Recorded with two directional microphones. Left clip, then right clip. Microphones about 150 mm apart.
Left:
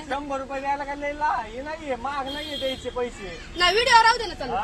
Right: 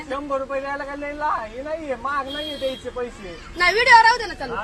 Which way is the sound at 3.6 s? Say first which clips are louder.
Right 4 dB; 10° left (ahead or behind).